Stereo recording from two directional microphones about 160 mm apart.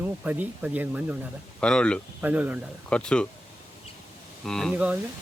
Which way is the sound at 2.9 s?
5° left (ahead or behind).